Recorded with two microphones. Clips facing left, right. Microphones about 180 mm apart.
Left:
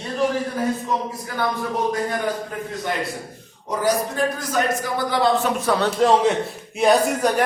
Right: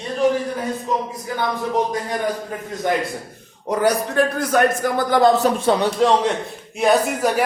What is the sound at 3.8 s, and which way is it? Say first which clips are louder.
Speech: right 3 dB; 65° right (ahead or behind).